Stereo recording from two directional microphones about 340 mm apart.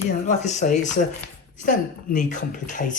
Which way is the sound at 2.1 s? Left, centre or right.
Left.